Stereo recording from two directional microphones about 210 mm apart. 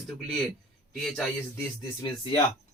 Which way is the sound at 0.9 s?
Centre (ahead or behind).